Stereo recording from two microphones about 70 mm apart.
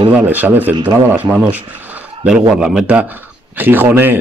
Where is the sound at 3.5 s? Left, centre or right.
Right.